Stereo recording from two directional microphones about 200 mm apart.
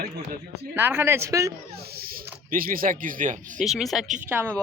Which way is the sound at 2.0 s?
45° right (ahead or behind).